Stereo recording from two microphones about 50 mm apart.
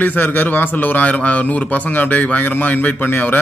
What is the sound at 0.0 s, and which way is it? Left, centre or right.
A man's voice, left.